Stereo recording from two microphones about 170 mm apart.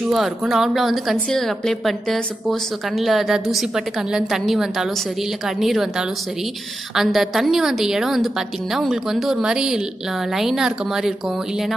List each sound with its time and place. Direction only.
0.1 s speech: centre (ahead or behind)